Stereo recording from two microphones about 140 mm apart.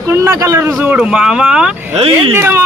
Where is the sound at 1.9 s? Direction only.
45° right (ahead or behind).